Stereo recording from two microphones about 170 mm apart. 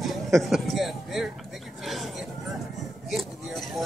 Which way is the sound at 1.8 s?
Centre (ahead or behind).